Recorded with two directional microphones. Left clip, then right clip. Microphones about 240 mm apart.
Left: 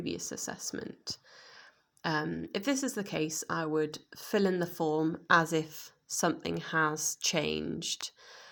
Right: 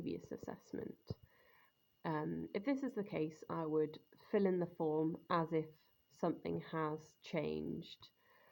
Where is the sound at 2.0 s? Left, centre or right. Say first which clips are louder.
Left 9 dB; left.